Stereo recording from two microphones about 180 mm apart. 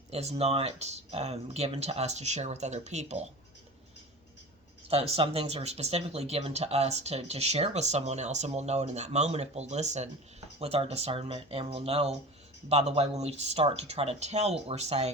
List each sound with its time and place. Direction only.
0.1 s speech: 35° right (ahead or behind)
4.9 s speech: 30° right (ahead or behind)